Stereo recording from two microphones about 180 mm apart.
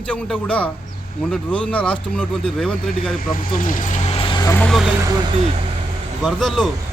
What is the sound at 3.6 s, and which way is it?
Speech, 45° left (ahead or behind).